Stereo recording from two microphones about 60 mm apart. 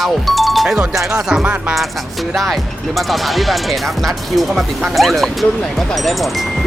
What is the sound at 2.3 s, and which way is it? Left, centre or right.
Speech, centre.